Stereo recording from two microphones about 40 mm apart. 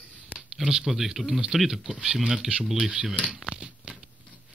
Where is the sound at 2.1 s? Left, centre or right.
Centre.